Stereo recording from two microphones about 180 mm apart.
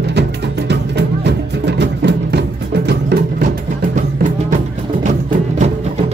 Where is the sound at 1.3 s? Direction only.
75° right (ahead or behind).